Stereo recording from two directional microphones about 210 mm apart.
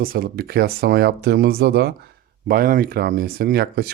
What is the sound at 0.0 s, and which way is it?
Speech, 45° right (ahead or behind).